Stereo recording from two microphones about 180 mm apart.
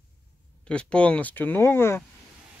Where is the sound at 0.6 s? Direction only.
5° left (ahead or behind).